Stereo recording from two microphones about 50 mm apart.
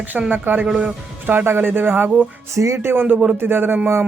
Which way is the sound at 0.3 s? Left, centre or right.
Right.